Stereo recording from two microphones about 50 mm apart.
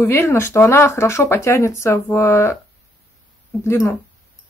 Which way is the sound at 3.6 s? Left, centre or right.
Left.